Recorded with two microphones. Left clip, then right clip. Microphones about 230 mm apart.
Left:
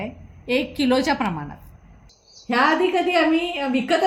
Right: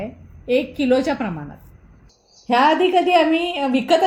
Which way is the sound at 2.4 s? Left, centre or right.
Right.